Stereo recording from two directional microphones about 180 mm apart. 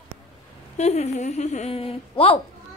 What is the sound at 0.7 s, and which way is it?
A woman's voice, 40° left (ahead or behind).